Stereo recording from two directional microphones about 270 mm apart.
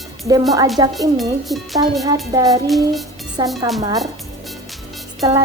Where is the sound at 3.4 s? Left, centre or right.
Centre.